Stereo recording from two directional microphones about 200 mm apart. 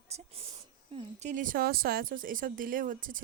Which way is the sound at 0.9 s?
35° right (ahead or behind).